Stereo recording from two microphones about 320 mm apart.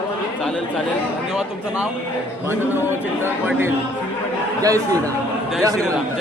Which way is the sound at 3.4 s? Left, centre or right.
Centre.